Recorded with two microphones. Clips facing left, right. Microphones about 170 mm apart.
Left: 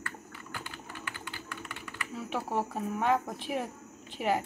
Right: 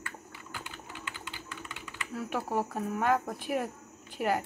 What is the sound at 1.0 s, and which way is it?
Typing, 20° right (ahead or behind).